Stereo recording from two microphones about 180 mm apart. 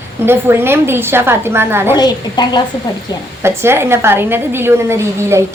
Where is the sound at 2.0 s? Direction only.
25° left (ahead or behind).